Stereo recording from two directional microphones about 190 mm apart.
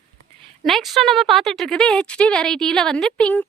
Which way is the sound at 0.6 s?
Centre (ahead or behind).